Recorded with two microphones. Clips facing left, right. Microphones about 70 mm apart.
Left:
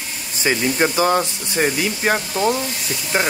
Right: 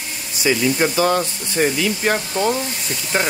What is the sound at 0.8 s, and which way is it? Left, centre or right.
Speech, centre.